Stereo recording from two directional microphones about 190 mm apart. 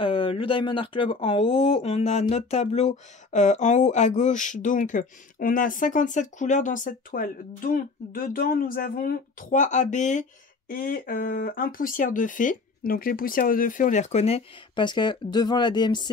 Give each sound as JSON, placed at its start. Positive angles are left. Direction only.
{"t": 0.0, "sound": "speech", "side_deg": 30}